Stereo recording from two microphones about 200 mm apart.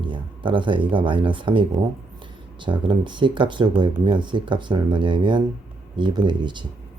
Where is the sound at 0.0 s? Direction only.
25° right (ahead or behind).